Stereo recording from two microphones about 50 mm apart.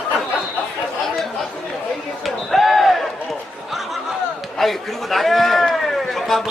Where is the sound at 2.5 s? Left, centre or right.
Centre.